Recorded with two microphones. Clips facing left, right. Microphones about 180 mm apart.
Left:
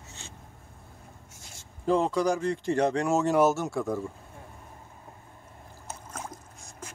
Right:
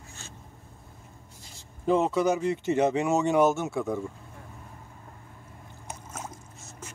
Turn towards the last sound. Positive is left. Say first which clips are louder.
# even
turn(degrees=-10)  # may be behind; listen again after turning